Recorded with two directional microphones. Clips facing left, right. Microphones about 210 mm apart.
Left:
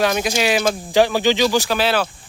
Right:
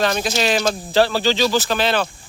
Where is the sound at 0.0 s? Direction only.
10° left (ahead or behind).